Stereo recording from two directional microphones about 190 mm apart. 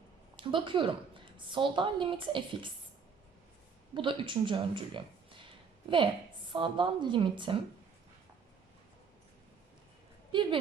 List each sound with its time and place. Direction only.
0.3 s a woman's voice: 25° right (ahead or behind)
3.9 s speech: 25° right (ahead or behind)
6.5 s a woman's voice: 25° right (ahead or behind)
10.3 s a woman's voice: 25° right (ahead or behind)